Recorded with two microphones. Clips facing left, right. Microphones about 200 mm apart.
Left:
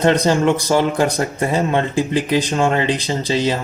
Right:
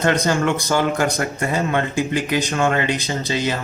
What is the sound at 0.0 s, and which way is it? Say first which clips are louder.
Speech: left 4 dB; 25° left (ahead or behind).